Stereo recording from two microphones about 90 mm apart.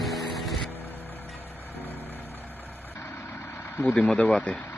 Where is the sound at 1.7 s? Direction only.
20° left (ahead or behind).